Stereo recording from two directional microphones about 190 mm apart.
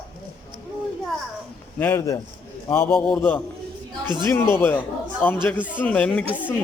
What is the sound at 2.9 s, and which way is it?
A man's voice, centre (ahead or behind).